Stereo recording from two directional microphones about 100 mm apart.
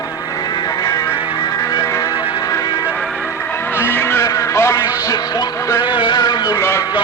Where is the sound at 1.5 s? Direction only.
35° left (ahead or behind).